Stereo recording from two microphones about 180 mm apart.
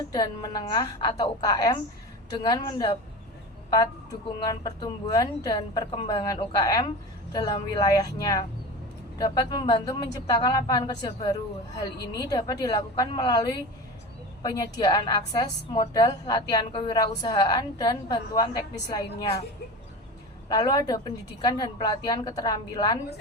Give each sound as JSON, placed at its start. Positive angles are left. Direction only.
{"t": 0.1, "sound": "a woman's voice", "side_deg": 25}
{"t": 4.4, "sound": "a woman's voice", "side_deg": 25}
{"t": 20.5, "sound": "a woman's voice", "side_deg": 25}